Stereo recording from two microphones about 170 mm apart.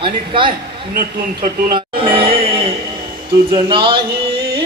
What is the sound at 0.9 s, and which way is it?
Speech, 55° right (ahead or behind).